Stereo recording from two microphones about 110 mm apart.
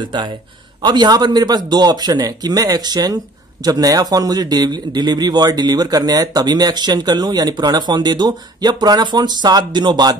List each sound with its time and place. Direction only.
0.0 s a man's voice: 45° right (ahead or behind)